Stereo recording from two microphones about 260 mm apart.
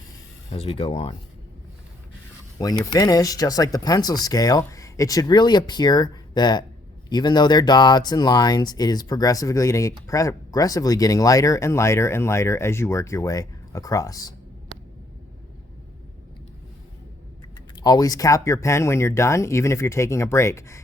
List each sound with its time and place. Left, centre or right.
0.5 s speech: left
2.6 s speech: centre
17.7 s speech: centre